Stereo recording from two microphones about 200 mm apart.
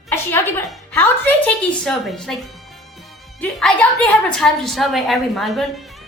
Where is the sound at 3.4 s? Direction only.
5° left (ahead or behind).